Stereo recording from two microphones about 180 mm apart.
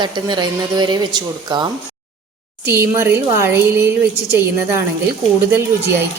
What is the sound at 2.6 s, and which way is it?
A woman's voice, 10° right (ahead or behind).